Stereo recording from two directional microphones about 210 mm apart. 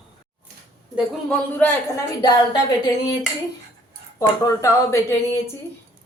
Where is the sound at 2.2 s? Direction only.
20° left (ahead or behind).